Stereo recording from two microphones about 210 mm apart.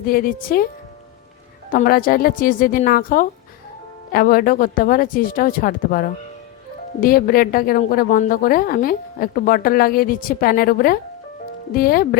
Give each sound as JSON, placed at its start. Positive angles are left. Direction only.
{"t": 0.0, "sound": "a woman's voice", "side_deg": 45}
{"t": 1.7, "sound": "a woman's voice", "side_deg": 40}